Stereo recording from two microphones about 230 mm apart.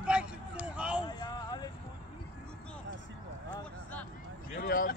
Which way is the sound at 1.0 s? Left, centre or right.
Centre.